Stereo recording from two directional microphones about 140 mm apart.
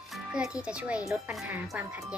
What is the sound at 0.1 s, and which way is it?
Music, 5° right (ahead or behind).